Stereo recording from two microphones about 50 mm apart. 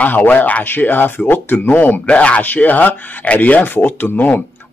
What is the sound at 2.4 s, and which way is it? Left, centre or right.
Speech, left.